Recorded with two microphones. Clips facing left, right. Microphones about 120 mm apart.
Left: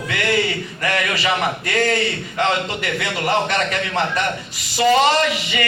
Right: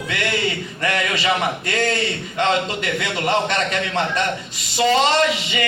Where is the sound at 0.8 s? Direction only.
25° right (ahead or behind).